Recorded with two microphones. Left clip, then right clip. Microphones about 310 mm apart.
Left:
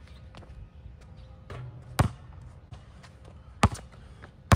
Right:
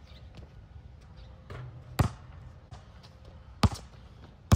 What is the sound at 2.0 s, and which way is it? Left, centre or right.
Basketball bounce, centre.